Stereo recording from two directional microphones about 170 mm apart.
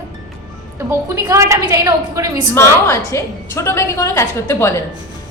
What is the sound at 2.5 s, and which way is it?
A woman's voice, 15° left (ahead or behind).